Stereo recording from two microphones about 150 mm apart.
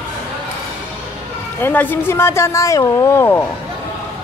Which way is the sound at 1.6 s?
10° left (ahead or behind).